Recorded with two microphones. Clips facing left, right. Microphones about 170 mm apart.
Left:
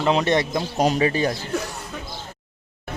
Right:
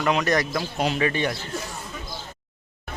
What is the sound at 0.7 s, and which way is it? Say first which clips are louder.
Speech: left 5 dB; 40° left (ahead or behind).